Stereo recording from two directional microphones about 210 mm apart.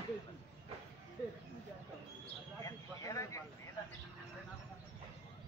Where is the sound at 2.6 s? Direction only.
15° left (ahead or behind).